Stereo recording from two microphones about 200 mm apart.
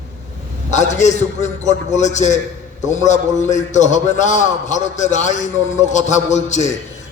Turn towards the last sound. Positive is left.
turn(degrees=35)  # may be behind; listen again after turning